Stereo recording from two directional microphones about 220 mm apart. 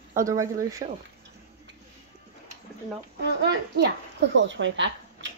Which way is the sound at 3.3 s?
50° right (ahead or behind).